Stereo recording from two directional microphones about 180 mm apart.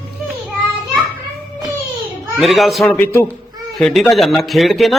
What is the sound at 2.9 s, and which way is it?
Speech, 10° left (ahead or behind).